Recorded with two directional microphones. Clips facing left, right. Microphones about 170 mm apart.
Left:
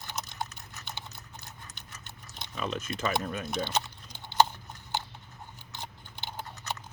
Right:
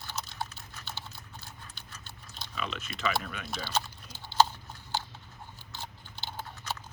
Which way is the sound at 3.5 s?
20° left (ahead or behind).